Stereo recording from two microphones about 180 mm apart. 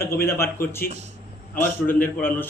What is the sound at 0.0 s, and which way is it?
Speech, 15° left (ahead or behind).